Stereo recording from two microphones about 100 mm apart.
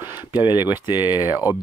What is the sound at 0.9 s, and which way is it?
Speech, 20° right (ahead or behind).